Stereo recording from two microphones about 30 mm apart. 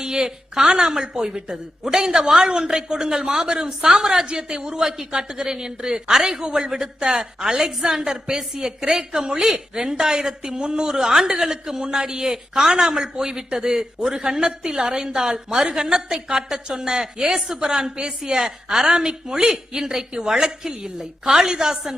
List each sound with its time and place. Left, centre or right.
0.0 s a man's voice: right